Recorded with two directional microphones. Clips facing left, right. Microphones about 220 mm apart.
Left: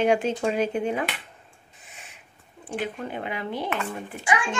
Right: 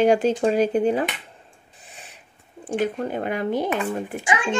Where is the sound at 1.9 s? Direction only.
35° right (ahead or behind).